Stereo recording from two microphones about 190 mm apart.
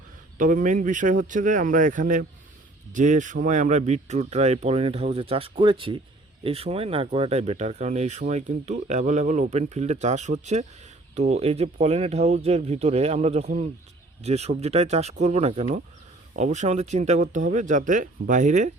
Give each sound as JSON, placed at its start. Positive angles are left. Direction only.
{"t": 0.3, "sound": "speech", "side_deg": -45}